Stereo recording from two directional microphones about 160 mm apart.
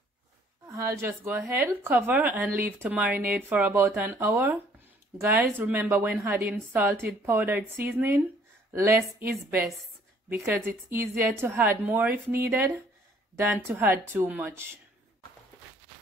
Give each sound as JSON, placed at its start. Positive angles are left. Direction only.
{"t": 0.7, "sound": "speech", "side_deg": -20}
{"t": 10.3, "sound": "speech", "side_deg": -15}